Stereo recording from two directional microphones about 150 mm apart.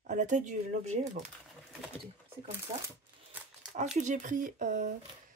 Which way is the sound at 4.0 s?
55° right (ahead or behind).